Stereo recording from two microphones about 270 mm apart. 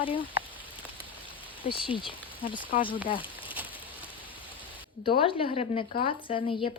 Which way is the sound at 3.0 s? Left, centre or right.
Centre.